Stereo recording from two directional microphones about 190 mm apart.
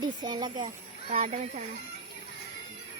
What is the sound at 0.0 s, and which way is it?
Speech, 20° right (ahead or behind).